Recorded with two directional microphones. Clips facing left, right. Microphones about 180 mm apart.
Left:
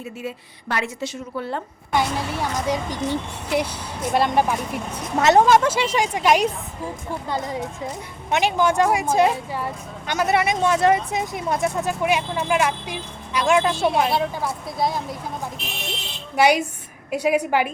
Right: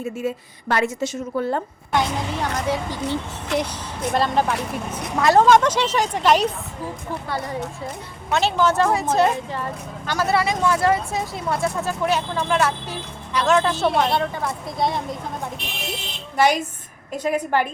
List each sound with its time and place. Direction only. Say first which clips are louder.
0.0 s a woman's voice: right 6 dB; 45° right (ahead or behind)
1.9 s speech: even; 10° left (ahead or behind)
5.5 s speech: right 1 dB; 5° left (ahead or behind)
13.8 s a woman's voice: even; centre (ahead or behind)
16.4 s speech: left 1 dB; 10° left (ahead or behind)